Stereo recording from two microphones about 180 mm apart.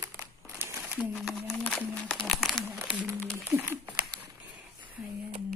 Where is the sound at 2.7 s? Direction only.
10° right (ahead or behind).